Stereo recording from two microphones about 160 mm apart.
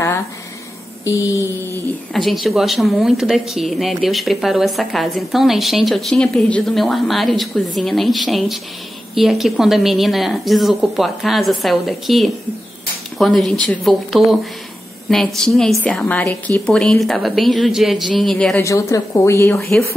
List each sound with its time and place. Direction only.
1.0 s a woman's voice: 20° left (ahead or behind)
2.1 s speech: centre (ahead or behind)
18.6 s a woman's voice: 20° left (ahead or behind)